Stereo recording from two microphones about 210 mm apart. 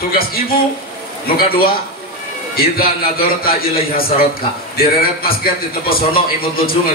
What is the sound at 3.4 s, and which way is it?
Speech, 45° left (ahead or behind).